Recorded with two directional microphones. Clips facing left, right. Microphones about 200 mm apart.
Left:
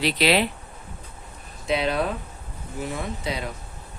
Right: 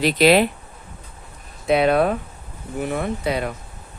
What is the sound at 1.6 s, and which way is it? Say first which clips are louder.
Speech: right 7 dB; 55° right (ahead or behind).